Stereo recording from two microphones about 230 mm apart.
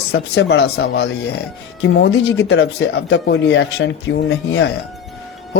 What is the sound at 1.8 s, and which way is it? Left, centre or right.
Speech, left.